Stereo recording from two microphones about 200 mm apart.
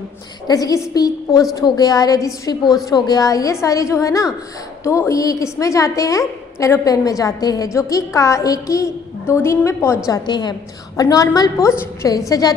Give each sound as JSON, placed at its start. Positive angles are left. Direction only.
{"t": 0.5, "sound": "a woman's voice", "side_deg": 20}